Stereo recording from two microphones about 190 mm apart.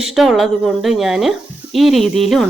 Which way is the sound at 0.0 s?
Centre (ahead or behind).